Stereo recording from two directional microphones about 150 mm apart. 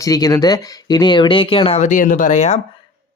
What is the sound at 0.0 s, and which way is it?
Speech, 25° left (ahead or behind).